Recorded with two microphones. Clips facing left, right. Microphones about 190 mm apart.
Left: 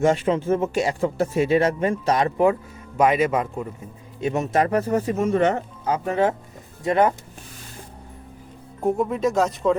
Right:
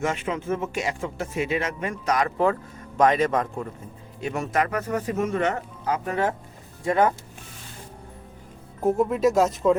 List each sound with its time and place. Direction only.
0.0 s speech: 35° left (ahead or behind)
3.0 s a man's voice: 10° left (ahead or behind)
4.2 s speech: 20° left (ahead or behind)
8.8 s speech: centre (ahead or behind)